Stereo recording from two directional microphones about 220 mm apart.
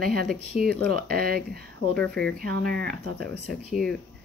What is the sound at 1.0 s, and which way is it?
Speech, 40° right (ahead or behind).